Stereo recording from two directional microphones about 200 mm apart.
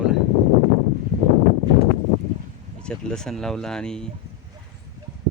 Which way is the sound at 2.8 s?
5° left (ahead or behind).